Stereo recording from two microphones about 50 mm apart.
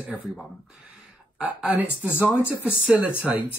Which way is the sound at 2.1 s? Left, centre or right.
Left.